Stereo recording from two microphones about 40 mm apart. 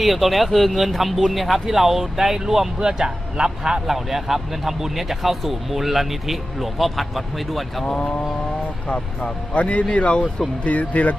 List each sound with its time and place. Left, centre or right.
0.0 s speech: centre
3.8 s speech: centre
7.9 s speech: left